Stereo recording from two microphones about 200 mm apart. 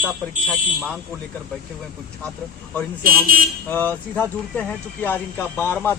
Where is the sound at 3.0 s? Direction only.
45° right (ahead or behind).